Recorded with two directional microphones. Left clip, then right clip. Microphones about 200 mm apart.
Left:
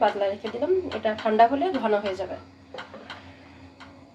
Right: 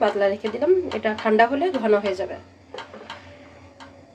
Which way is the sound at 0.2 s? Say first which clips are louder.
Right 5 dB; 35° right (ahead or behind).